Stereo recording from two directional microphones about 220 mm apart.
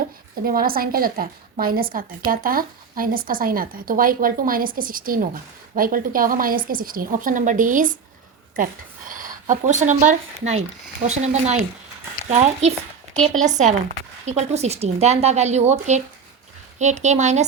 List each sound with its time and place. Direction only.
0.4 s speech: 40° right (ahead or behind)
14.3 s speech: 30° right (ahead or behind)